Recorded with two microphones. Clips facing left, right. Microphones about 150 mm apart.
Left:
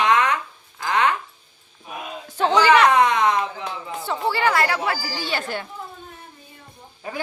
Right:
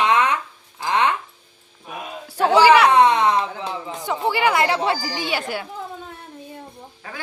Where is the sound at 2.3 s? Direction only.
10° right (ahead or behind).